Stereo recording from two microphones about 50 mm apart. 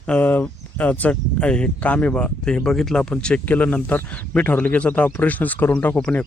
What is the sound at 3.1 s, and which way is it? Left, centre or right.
Speech, left.